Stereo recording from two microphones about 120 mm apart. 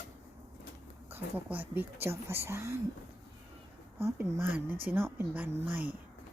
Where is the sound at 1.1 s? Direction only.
15° right (ahead or behind).